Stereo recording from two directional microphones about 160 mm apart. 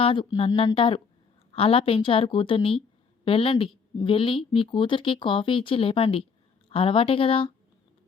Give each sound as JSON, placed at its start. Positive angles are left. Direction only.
{"t": 0.0, "sound": "speech", "side_deg": 35}